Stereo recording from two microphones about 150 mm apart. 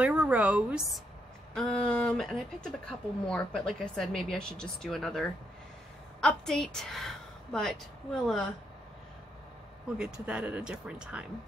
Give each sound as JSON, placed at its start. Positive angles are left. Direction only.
{"t": 0.0, "sound": "a woman's voice", "side_deg": -10}
{"t": 1.5, "sound": "speech", "side_deg": 5}
{"t": 9.9, "sound": "speech", "side_deg": -5}